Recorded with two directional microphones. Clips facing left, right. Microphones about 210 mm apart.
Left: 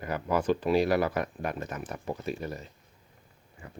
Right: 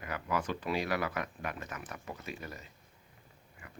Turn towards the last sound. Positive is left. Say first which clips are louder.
# left 6 dB
turn(degrees=30)  # may be behind; listen again after turning